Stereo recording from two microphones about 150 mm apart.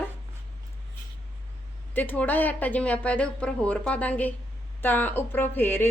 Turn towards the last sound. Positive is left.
turn(degrees=15)  # may be behind; listen again after turning